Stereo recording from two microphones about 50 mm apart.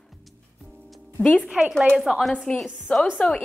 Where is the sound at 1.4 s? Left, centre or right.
Centre.